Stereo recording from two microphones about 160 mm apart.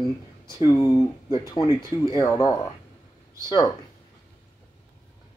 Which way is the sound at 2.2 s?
20° left (ahead or behind).